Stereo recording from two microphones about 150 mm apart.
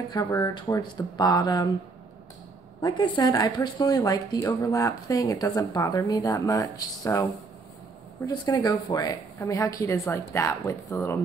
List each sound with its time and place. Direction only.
0.1 s speech: 25° left (ahead or behind)
2.8 s speech: 25° left (ahead or behind)
8.3 s speech: 25° left (ahead or behind)